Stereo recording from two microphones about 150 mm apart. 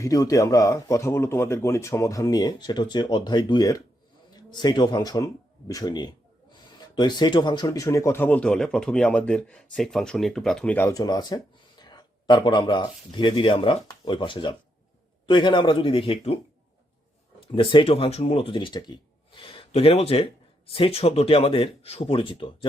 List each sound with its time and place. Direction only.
0.0 s speech: 25° left (ahead or behind); by 10.8 s 10° left (ahead or behind)
10.8 s speech: 25° left (ahead or behind); by 16.4 s 40° left (ahead or behind)
17.5 s speech: 35° left (ahead or behind)